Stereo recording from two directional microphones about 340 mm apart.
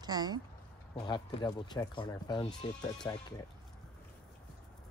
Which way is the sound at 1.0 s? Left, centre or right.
Centre.